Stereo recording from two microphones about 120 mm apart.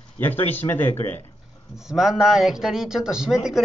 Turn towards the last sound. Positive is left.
turn(degrees=-5)  # may be behind; listen again after turning